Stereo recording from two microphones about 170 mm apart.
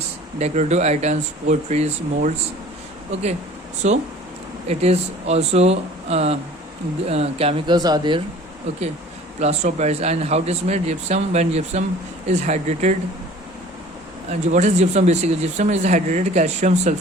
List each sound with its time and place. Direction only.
0.3 s speech: 40° right (ahead or behind)
3.8 s speech: 45° right (ahead or behind)
7.8 s speech: 25° right (ahead or behind)
9.4 s speech: 40° right (ahead or behind)
14.4 s speech: 45° right (ahead or behind)